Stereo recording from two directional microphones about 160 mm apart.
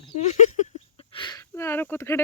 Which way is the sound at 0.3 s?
50° left (ahead or behind).